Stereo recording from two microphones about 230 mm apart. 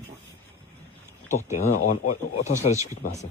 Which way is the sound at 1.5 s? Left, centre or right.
Left.